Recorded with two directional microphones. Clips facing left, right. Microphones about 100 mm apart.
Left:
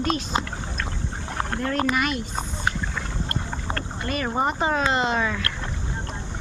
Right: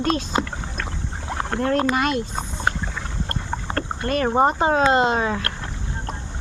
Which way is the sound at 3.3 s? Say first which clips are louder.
Right 5 dB; 40° right (ahead or behind).